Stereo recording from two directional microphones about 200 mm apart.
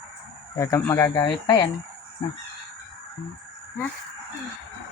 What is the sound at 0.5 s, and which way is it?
Speech, 15° left (ahead or behind).